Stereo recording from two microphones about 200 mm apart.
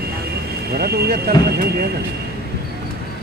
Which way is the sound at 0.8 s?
50° right (ahead or behind).